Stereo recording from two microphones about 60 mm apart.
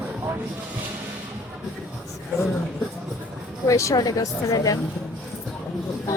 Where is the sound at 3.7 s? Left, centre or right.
Left.